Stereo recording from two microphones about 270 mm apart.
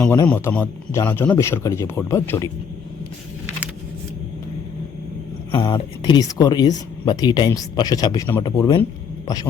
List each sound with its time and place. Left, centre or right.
0.0 s speech: centre
5.5 s speech: centre